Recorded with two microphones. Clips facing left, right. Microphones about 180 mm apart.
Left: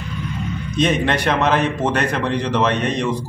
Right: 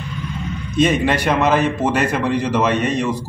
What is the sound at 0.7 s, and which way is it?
A man's voice, 5° right (ahead or behind).